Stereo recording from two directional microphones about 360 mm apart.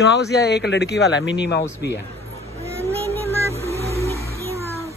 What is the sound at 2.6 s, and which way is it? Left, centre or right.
Vehicle, centre.